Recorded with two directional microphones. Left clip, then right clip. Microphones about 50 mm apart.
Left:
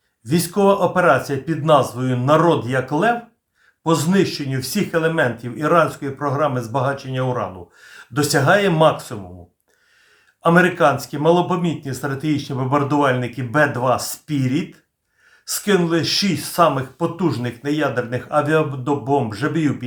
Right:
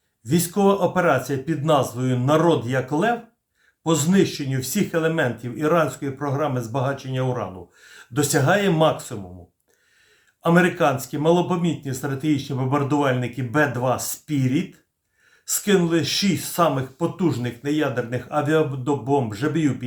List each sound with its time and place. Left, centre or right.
0.3 s speech: left
10.4 s speech: left